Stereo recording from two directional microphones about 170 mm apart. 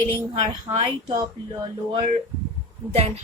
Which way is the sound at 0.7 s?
25° right (ahead or behind).